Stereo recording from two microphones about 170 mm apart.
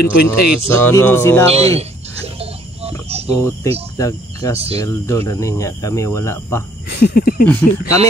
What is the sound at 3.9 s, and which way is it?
Cricket, 20° left (ahead or behind).